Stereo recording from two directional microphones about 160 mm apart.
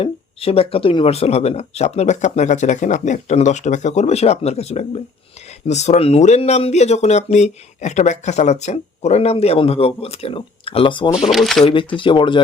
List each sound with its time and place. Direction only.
0.0 s speech: 35° left (ahead or behind)
11.3 s speech: centre (ahead or behind)
11.6 s speech: 30° left (ahead or behind)